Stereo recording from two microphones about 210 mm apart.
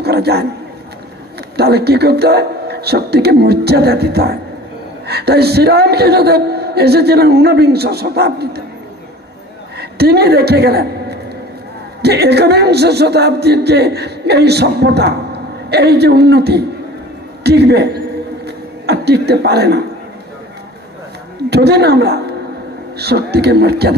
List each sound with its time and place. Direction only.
0.0 s speech: 50° right (ahead or behind)
1.6 s speech: 50° right (ahead or behind)
9.8 s a woman's voice: 50° right (ahead or behind)
17.4 s a sound: 50° right (ahead or behind)
21.5 s speech: 50° right (ahead or behind)